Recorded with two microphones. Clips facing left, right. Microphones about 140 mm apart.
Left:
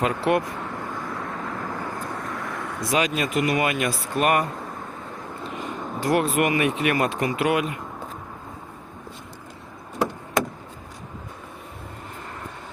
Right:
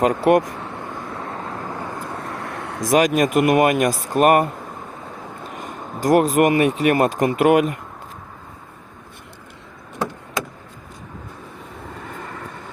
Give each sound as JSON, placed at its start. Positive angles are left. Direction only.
{"t": 0.0, "sound": "speech", "side_deg": -45}
{"t": 2.3, "sound": "vehicle", "side_deg": -30}
{"t": 2.8, "sound": "speech", "side_deg": -45}
{"t": 5.5, "sound": "speech", "side_deg": -45}